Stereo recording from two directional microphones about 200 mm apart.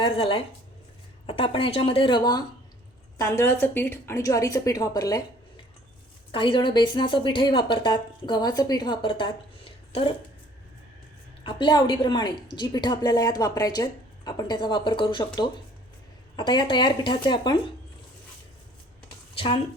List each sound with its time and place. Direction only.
0.0 s a woman's voice: 25° left (ahead or behind)
6.3 s a woman's voice: 25° left (ahead or behind)
11.4 s a woman's voice: 25° left (ahead or behind)
19.3 s speech: 25° left (ahead or behind)